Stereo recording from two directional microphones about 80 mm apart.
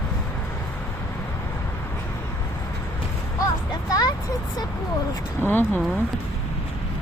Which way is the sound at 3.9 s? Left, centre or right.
Left.